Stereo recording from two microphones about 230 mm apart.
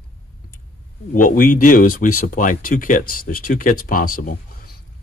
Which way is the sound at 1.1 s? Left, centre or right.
Left.